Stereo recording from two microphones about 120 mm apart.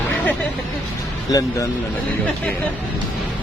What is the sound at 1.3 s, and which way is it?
Speech, 30° left (ahead or behind).